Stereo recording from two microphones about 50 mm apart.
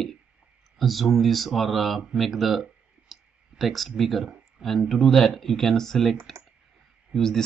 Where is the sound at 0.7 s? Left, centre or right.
Centre.